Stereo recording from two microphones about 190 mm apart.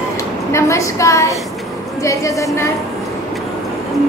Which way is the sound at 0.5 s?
15° left (ahead or behind).